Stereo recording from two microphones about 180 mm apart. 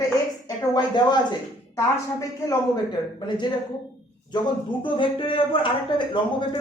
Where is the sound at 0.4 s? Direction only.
20° left (ahead or behind).